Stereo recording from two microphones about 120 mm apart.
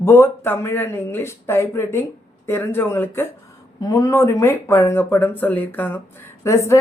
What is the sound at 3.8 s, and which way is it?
Speech, 30° left (ahead or behind).